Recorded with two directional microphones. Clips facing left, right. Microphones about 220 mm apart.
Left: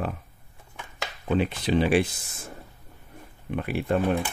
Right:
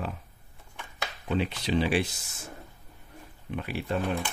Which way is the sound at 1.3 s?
50° left (ahead or behind).